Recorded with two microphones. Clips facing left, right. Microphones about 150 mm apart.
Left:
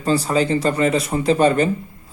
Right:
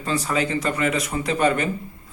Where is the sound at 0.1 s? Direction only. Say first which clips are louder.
Left 5 dB; 30° left (ahead or behind).